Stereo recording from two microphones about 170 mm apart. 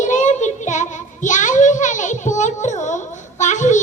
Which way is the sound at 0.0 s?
45° left (ahead or behind).